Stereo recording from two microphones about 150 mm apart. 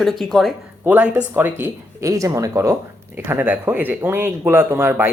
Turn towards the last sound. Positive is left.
turn(degrees=-15)  # may be behind; listen again after turning